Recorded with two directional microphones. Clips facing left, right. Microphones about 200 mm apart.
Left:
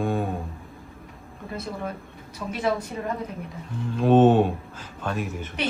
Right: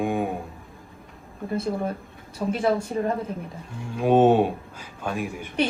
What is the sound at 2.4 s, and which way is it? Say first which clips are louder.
Speech: right 3 dB; 30° right (ahead or behind).